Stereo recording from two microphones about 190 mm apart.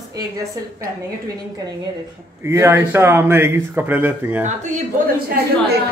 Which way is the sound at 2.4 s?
15° right (ahead or behind).